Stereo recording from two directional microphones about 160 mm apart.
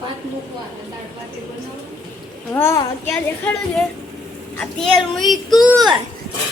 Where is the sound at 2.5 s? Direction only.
15° left (ahead or behind).